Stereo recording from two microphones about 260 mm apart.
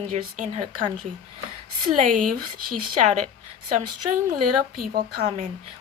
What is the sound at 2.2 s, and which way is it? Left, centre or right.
Speech, right.